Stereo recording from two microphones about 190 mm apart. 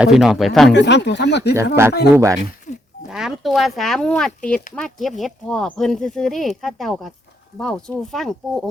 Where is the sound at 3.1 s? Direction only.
Centre (ahead or behind).